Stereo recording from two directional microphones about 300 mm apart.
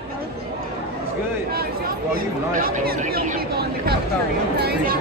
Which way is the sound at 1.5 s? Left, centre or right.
Right.